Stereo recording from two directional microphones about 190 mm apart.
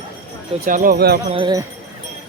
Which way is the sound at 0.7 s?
45° right (ahead or behind).